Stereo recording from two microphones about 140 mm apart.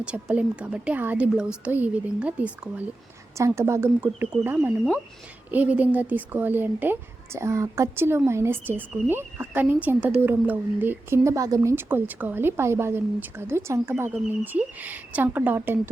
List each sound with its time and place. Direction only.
0.0 s a woman's voice: 5° right (ahead or behind)
3.3 s a woman's voice: 20° right (ahead or behind)